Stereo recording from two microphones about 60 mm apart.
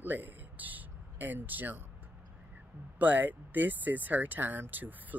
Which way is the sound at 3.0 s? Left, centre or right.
Right.